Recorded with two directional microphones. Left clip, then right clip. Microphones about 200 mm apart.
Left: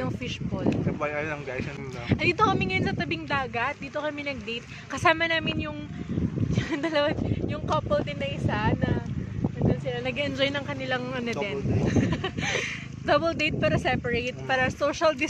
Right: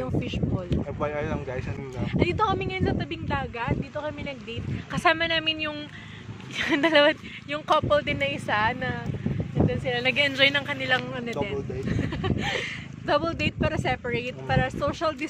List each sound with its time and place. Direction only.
0.7 s speech: 5° right (ahead or behind)
2.0 s speech: 25° left (ahead or behind); by 4.1 s 40° left (ahead or behind)
4.9 s speech: 15° left (ahead or behind)
6.5 s speech: 30° right (ahead or behind)
10.0 s speech: centre (ahead or behind)
10.3 s speech: 15° left (ahead or behind)